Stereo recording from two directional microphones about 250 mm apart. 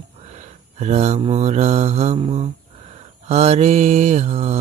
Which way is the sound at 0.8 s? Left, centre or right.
Right.